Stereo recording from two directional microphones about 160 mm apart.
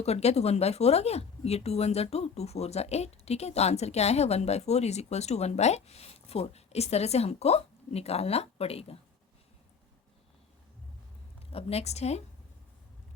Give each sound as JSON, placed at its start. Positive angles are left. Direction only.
{"t": 0.0, "sound": "speech", "side_deg": 40}
{"t": 11.5, "sound": "a woman's voice", "side_deg": 40}